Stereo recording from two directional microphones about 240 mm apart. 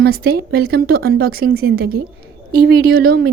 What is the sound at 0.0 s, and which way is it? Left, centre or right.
A woman's voice, right.